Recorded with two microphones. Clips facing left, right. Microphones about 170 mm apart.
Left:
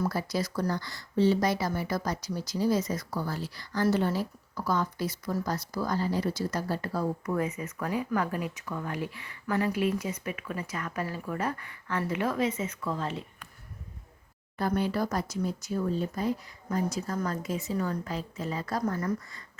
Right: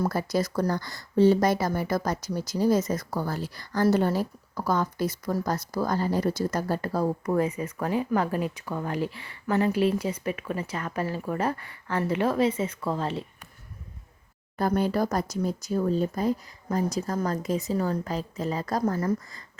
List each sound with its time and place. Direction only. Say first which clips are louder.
0.0 s speech: right 4 dB; 50° right (ahead or behind); by 13.2 s 30° right (ahead or behind)
14.6 s speech: right 4 dB; 45° right (ahead or behind)